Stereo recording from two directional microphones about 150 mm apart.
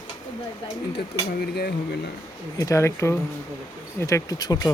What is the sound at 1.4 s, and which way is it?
Speech, 90° left.